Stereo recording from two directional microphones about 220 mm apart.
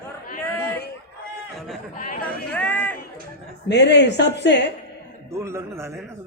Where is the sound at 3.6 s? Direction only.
50° left (ahead or behind).